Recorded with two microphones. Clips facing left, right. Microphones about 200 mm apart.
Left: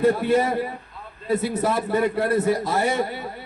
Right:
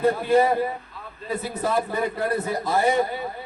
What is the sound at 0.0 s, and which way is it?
A man's voice, 75° left (ahead or behind).